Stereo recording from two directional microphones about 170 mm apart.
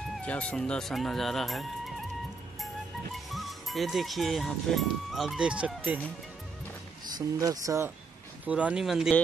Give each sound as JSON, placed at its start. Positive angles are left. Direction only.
{"t": 0.2, "sound": "speech", "side_deg": 5}
{"t": 3.3, "sound": "speech", "side_deg": 0}
{"t": 7.2, "sound": "speech", "side_deg": -20}
{"t": 8.5, "sound": "speech", "side_deg": -5}